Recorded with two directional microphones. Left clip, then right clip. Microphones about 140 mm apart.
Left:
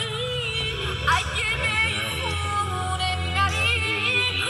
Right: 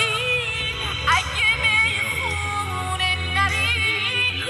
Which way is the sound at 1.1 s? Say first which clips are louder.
Right 4 dB; 45° right (ahead or behind).